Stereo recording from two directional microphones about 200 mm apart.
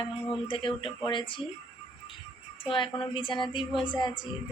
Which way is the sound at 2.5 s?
25° left (ahead or behind).